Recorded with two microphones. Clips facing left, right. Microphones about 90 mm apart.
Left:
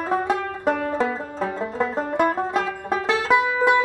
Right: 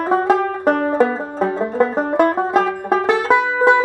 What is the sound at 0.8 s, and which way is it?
Banjo, 40° right (ahead or behind).